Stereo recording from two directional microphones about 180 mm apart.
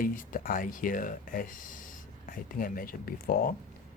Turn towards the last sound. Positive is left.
turn(degrees=55)  # may be behind; listen again after turning